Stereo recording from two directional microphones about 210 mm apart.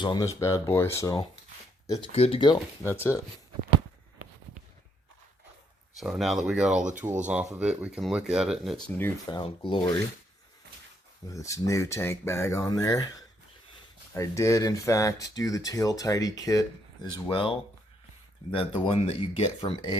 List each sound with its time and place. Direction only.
0.0 s speech: 20° left (ahead or behind)
2.1 s speech: 30° left (ahead or behind)
2.9 s speech: 10° left (ahead or behind)
6.0 s speech: centre (ahead or behind)
9.3 s speech: 25° left (ahead or behind)
11.3 s speech: 15° left (ahead or behind)